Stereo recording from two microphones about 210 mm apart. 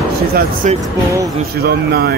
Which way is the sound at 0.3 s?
45° right (ahead or behind).